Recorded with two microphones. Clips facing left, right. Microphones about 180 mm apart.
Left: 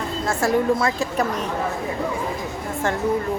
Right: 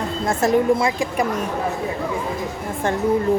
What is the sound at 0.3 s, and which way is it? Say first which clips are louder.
Speech: right 3 dB; 15° right (ahead or behind).